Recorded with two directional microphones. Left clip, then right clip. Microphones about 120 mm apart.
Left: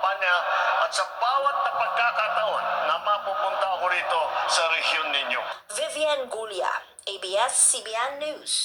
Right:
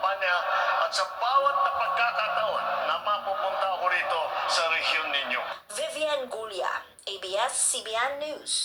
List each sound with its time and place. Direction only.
0.0 s music: 35° left (ahead or behind)
5.8 s a sound: 40° left (ahead or behind)
7.3 s a woman's voice: 35° left (ahead or behind)